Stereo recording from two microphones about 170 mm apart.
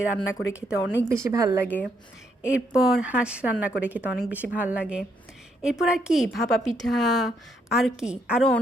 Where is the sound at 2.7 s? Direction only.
5° right (ahead or behind).